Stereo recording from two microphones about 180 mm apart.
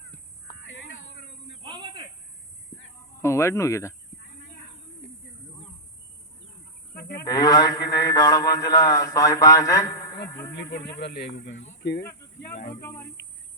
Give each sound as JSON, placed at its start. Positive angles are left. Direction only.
{"t": 1.6, "sound": "snake", "side_deg": -25}
{"t": 3.2, "sound": "speech", "side_deg": 15}
{"t": 7.2, "sound": "mantra", "side_deg": 20}
{"t": 10.2, "sound": "speech", "side_deg": 15}
{"t": 10.5, "sound": "speech", "side_deg": 65}
{"t": 11.7, "sound": "speech", "side_deg": 65}
{"t": 12.0, "sound": "speech", "side_deg": 15}